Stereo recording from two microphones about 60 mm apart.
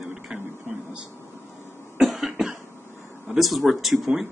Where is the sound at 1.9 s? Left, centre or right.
Centre.